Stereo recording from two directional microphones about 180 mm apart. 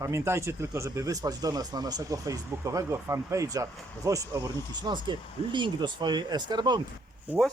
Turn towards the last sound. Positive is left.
turn(degrees=0)  # may be behind; listen again after turning